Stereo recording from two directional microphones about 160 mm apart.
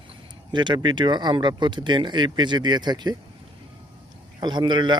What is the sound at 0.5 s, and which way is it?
Speech, 30° right (ahead or behind).